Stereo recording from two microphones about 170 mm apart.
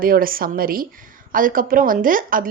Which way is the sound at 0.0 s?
55° right (ahead or behind).